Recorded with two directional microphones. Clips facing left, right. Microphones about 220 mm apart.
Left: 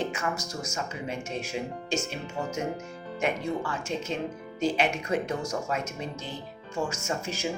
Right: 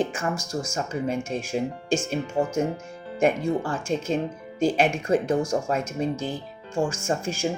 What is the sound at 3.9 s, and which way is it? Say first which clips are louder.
Speech: right 8 dB; 45° right (ahead or behind).